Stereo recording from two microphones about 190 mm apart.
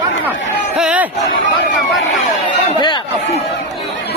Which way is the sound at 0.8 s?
5° right (ahead or behind).